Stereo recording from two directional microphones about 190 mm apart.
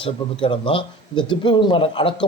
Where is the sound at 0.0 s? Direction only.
30° left (ahead or behind).